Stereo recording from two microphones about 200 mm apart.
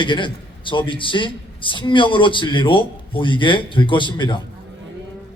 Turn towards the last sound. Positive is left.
turn(degrees=25)  # may be behind; listen again after turning